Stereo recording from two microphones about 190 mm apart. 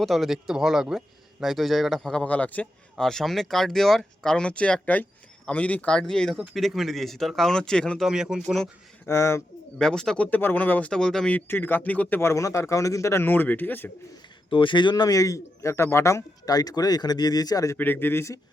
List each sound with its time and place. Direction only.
0.0 s speech: centre (ahead or behind)
9.0 s speech: 15° left (ahead or behind)
9.7 s speech: 5° left (ahead or behind)
14.5 s a man's voice: 25° left (ahead or behind)